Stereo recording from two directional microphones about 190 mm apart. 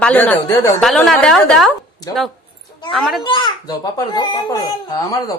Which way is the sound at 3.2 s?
25° left (ahead or behind).